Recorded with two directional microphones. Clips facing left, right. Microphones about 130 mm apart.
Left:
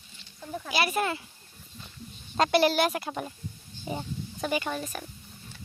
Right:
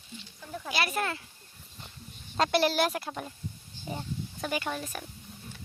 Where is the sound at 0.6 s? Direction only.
5° left (ahead or behind).